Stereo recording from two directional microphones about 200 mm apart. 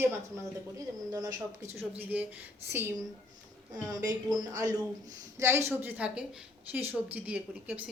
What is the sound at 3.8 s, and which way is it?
A woman's voice, 15° right (ahead or behind).